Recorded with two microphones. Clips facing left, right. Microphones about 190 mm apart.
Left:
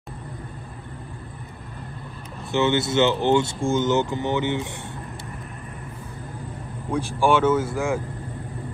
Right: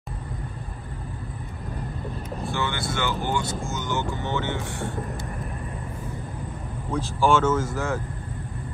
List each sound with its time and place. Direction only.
2.5 s speech: 25° left (ahead or behind)
6.9 s speech: 15° left (ahead or behind)